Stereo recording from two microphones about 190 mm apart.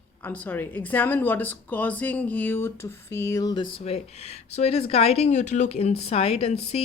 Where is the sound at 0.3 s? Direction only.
10° left (ahead or behind).